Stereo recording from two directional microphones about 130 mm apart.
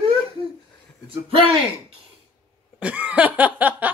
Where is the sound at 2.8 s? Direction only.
10° right (ahead or behind).